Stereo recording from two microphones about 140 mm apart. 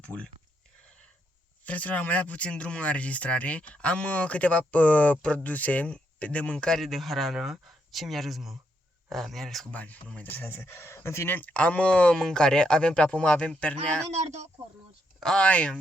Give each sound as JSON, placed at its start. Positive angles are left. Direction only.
{"t": 0.0, "sound": "speech", "side_deg": 10}
{"t": 1.6, "sound": "speech", "side_deg": 10}
{"t": 14.1, "sound": "speech", "side_deg": -55}
{"t": 15.2, "sound": "speech", "side_deg": 5}